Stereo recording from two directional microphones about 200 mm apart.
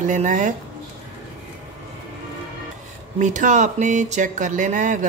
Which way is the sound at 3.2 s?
40° right (ahead or behind).